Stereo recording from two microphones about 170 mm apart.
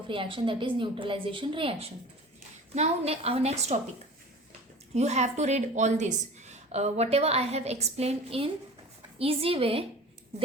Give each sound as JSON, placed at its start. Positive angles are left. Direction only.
{"t": 0.1, "sound": "a woman's voice", "side_deg": -30}
{"t": 4.9, "sound": "a woman's voice", "side_deg": -40}